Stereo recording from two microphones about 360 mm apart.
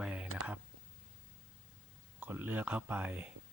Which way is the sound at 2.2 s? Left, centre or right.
Centre.